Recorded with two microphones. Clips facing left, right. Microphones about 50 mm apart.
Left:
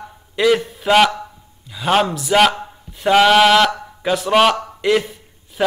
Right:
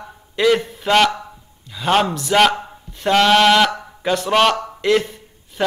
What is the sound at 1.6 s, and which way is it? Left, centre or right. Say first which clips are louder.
A man's voice: even; centre.